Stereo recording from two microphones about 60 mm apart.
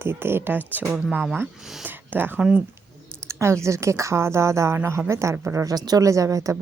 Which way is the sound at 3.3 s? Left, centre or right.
Right.